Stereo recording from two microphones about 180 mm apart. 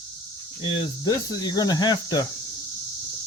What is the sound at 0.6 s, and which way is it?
Speech, 25° left (ahead or behind).